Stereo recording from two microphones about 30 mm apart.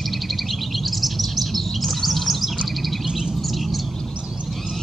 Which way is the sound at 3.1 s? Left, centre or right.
Centre.